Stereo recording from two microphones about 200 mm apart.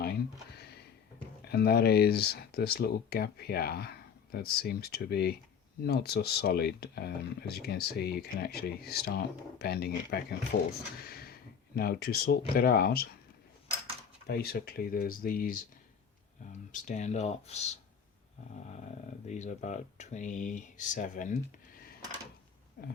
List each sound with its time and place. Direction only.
0.0 s a sound: 55° left (ahead or behind)
1.5 s speech: 50° left (ahead or behind)
14.3 s speech: 50° left (ahead or behind)
16.7 s speech: 40° left (ahead or behind)
19.3 s speech: 35° left (ahead or behind)
22.8 s speech: 45° left (ahead or behind)